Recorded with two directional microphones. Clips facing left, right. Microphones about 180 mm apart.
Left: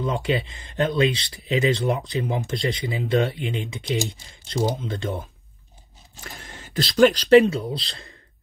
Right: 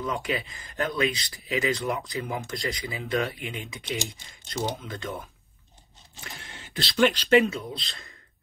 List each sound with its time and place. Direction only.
0.0 s speech: 30° left (ahead or behind)
6.4 s speech: 45° left (ahead or behind)